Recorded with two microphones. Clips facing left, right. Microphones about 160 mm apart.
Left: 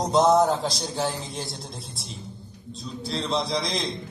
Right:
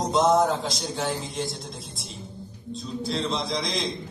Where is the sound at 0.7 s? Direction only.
35° left (ahead or behind).